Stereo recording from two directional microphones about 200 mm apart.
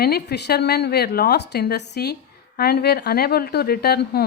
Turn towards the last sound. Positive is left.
turn(degrees=50)  # may be behind; listen again after turning